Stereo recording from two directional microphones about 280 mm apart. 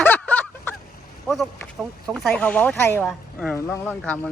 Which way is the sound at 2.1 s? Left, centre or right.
Centre.